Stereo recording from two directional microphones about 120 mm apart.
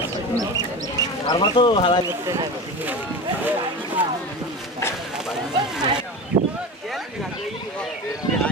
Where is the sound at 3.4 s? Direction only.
15° right (ahead or behind).